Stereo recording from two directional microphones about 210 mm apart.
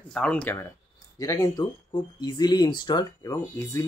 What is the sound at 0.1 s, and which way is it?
Speech, 5° left (ahead or behind).